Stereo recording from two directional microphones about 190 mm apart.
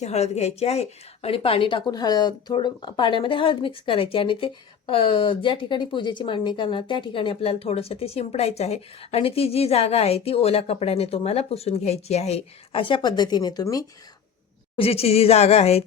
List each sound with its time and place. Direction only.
0.0 s a woman's voice: 35° left (ahead or behind); by 13.8 s 20° left (ahead or behind)
14.8 s speech: 30° left (ahead or behind)